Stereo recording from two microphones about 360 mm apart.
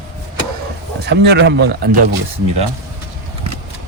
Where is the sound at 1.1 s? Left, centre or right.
Right.